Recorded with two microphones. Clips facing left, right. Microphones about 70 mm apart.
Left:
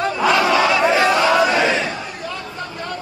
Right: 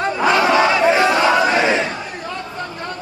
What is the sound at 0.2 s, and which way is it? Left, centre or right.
Battle cry, right.